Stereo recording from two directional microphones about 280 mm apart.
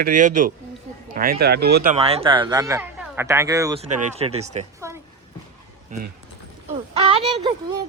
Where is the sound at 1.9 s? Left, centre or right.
Right.